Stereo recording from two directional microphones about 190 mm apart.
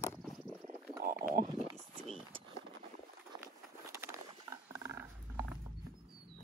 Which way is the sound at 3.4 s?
15° right (ahead or behind).